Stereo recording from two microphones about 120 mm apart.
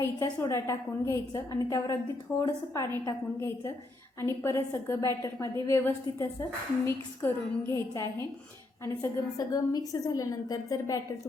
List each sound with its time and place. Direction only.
0.0 s a woman's voice: 25° left (ahead or behind)